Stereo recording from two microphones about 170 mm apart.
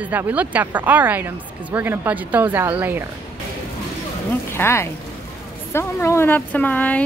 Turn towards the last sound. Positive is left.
turn(degrees=10)  # may be behind; listen again after turning